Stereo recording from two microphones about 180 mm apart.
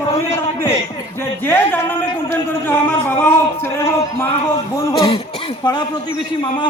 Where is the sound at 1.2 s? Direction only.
10° left (ahead or behind).